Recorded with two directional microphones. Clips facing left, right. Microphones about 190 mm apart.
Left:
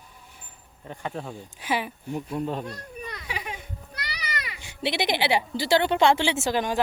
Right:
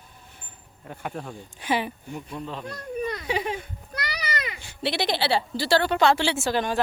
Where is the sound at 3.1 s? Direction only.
30° right (ahead or behind).